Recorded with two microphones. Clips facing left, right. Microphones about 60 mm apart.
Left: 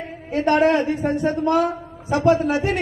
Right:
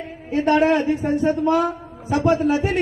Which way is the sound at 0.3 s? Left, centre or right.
Left.